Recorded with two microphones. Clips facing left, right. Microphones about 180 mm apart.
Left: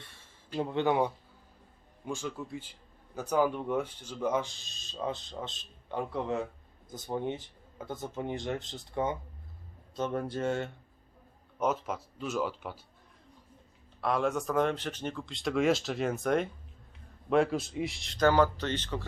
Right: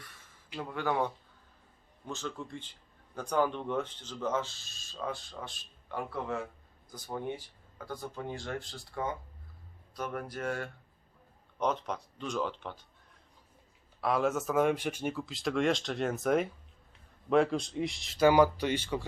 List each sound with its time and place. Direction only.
0.0 s a sound: 30° left (ahead or behind)
2.0 s speech: 10° left (ahead or behind)
11.6 s speech: 5° left (ahead or behind)
14.0 s speech: centre (ahead or behind)